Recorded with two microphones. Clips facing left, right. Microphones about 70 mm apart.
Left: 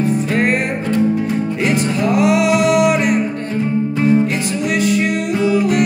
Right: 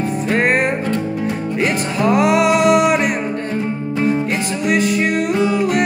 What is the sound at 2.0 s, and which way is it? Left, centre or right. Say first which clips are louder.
Music: right 1 dB; right.